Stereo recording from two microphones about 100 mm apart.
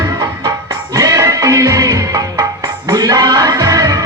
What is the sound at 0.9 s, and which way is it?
Music, 35° right (ahead or behind).